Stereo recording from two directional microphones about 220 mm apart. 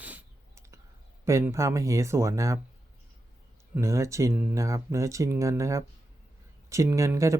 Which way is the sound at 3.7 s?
15° right (ahead or behind).